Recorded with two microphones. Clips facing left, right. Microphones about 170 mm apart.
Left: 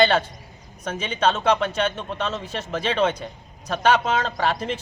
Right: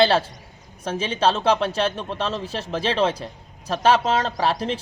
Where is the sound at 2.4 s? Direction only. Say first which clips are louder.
Right 2 dB; 30° right (ahead or behind).